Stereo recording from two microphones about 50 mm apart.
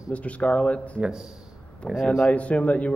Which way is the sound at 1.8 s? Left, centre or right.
Centre.